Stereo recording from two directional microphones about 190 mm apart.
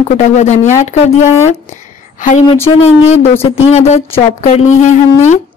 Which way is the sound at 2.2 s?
40° left (ahead or behind).